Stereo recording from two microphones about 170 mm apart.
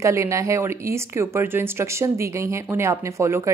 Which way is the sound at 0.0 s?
15° right (ahead or behind).